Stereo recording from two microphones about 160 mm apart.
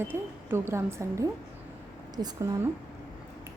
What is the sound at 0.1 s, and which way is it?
A woman's voice, 15° right (ahead or behind).